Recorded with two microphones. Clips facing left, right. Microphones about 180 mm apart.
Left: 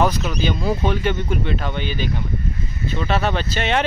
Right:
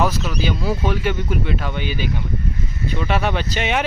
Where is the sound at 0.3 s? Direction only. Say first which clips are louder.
Left 1 dB; 5° right (ahead or behind).